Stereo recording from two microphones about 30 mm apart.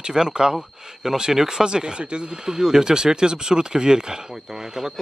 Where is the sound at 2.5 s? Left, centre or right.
Centre.